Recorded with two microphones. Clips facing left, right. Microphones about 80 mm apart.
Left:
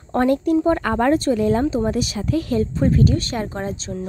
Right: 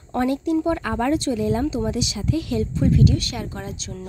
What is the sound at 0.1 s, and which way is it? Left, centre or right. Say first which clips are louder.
Speech: left 4 dB; left.